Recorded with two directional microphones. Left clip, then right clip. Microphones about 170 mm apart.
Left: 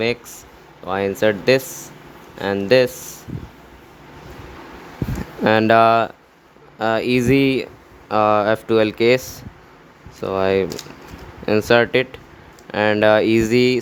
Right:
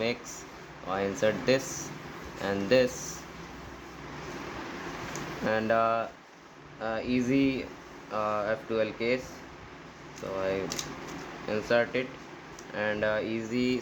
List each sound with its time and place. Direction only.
0.9 s speech: 50° left (ahead or behind)
5.5 s speech: 75° left (ahead or behind)
6.7 s speech: 90° left
10.3 s speech: 90° left; by 13.7 s 65° left (ahead or behind)